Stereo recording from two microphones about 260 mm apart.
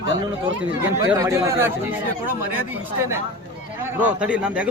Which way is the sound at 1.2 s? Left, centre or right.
Centre.